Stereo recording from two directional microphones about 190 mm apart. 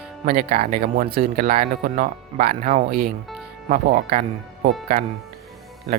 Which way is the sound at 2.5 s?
35° right (ahead or behind).